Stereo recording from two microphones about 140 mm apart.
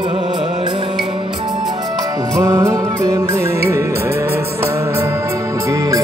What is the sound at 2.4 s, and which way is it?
Music, 25° right (ahead or behind).